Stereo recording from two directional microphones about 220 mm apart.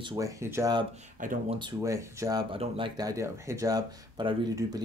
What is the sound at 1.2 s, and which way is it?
Speech, 35° right (ahead or behind).